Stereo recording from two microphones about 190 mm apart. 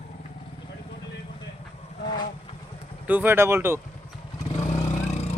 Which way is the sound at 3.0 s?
10° right (ahead or behind).